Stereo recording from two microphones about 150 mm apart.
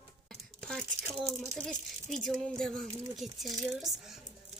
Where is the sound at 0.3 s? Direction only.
5° left (ahead or behind).